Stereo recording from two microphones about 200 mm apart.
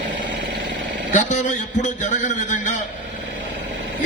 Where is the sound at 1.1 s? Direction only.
35° left (ahead or behind).